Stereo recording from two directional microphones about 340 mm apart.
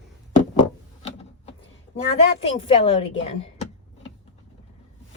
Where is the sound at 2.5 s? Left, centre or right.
Centre.